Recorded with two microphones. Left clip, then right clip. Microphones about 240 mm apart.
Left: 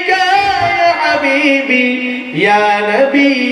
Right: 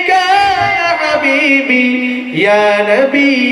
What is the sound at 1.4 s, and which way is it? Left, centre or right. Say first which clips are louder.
Mantra: right 1 dB; right.